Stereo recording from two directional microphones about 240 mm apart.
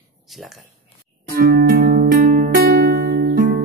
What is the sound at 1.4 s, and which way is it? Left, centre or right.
Music, right.